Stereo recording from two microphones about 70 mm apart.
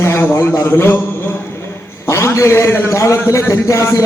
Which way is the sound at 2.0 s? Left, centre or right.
Left.